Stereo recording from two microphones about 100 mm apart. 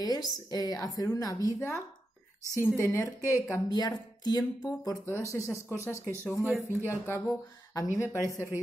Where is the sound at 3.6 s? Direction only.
40° left (ahead or behind).